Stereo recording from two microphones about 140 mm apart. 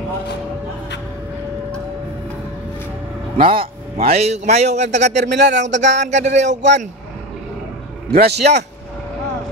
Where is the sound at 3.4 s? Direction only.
40° right (ahead or behind); by 6.5 s 55° right (ahead or behind).